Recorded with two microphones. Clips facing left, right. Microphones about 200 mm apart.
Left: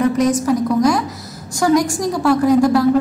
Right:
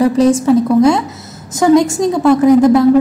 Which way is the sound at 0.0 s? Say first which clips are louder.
Right 5 dB; 30° right (ahead or behind).